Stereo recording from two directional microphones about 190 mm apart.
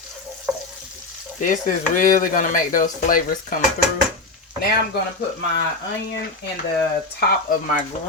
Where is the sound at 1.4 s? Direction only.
45° left (ahead or behind).